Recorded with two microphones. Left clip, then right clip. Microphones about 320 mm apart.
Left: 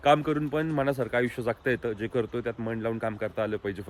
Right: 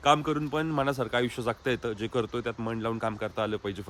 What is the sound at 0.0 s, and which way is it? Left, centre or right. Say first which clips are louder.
A man's voice: left 1 dB; centre.